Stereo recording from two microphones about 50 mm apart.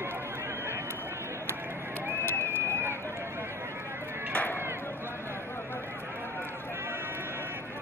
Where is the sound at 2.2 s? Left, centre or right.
Left.